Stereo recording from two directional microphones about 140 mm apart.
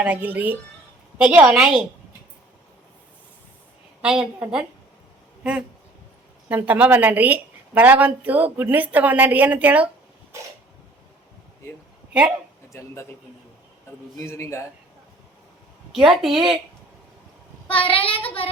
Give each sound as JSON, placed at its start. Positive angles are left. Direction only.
{"t": 0.0, "sound": "a woman's voice", "side_deg": -10}
{"t": 4.0, "sound": "a woman's voice", "side_deg": -5}
{"t": 10.3, "sound": "sneeze", "side_deg": -20}
{"t": 12.7, "sound": "a man's voice", "side_deg": 20}
{"t": 14.2, "sound": "a man's voice", "side_deg": 20}
{"t": 15.9, "sound": "a woman's voice", "side_deg": 0}
{"t": 17.8, "sound": "child singing", "side_deg": 40}